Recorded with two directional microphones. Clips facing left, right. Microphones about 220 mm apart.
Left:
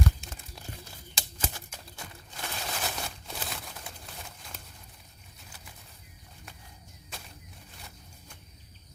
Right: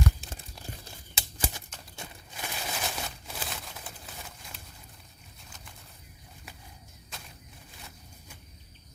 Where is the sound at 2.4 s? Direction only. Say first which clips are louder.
Even; 10° right (ahead or behind).